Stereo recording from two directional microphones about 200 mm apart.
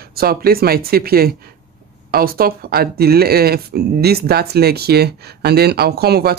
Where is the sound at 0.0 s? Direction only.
50° right (ahead or behind).